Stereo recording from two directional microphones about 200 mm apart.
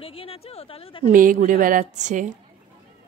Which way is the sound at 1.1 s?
45° right (ahead or behind).